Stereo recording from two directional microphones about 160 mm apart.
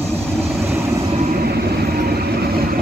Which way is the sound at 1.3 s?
75° right (ahead or behind).